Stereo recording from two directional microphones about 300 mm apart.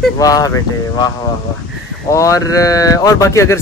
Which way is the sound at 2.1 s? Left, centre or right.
Centre.